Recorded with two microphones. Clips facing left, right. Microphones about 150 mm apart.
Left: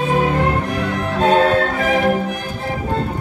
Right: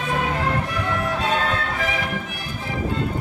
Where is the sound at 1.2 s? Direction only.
45° left (ahead or behind).